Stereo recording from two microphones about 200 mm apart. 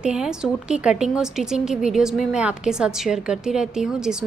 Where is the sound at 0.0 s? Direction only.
5° right (ahead or behind).